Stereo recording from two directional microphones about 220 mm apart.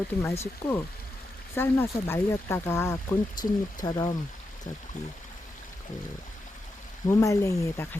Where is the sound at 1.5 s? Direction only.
10° left (ahead or behind).